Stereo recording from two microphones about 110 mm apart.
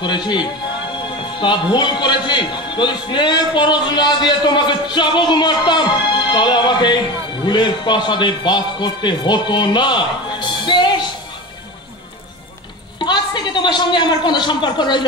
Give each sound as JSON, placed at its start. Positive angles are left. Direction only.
{"t": 0.0, "sound": "a man's voice", "side_deg": 45}
{"t": 13.0, "sound": "a woman's voice", "side_deg": 45}